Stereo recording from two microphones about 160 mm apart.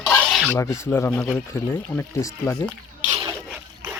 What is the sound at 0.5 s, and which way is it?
Speech, 15° left (ahead or behind).